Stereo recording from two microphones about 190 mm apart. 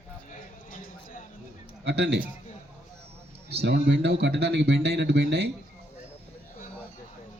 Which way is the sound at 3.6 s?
70° right (ahead or behind).